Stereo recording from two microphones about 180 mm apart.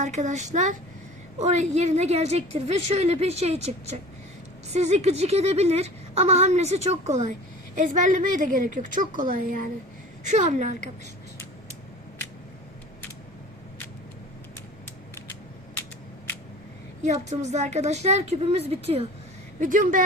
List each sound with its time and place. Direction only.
0.0 s a woman's voice: 40° right (ahead or behind)
17.0 s a woman's voice: 40° right (ahead or behind)
19.5 s a woman's voice: 45° right (ahead or behind)